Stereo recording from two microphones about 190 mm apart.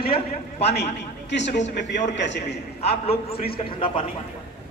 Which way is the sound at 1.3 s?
70° left (ahead or behind).